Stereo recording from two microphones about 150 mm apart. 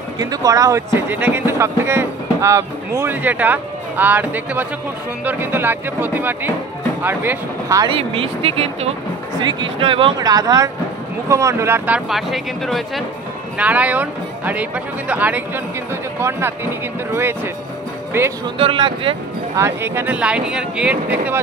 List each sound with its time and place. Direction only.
0.2 s speech: 25° right (ahead or behind)
7.9 s speech: 40° right (ahead or behind); by 18.3 s 15° right (ahead or behind)
18.6 s speech: 35° right (ahead or behind)
19.5 s speech: 15° right (ahead or behind)